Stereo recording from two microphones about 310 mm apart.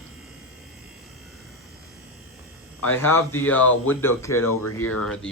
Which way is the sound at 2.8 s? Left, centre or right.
Centre.